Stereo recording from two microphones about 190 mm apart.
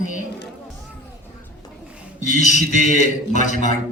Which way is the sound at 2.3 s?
40° left (ahead or behind).